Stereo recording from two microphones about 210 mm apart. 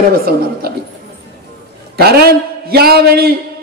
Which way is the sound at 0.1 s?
45° right (ahead or behind).